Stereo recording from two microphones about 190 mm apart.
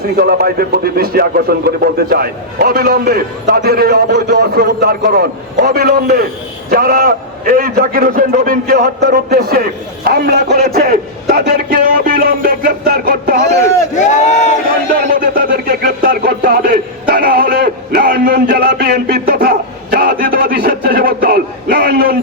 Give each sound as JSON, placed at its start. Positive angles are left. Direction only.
{"t": 0.2, "sound": "speech", "side_deg": -55}
{"t": 13.9, "sound": "speech", "side_deg": 40}
{"t": 15.0, "sound": "speech", "side_deg": -45}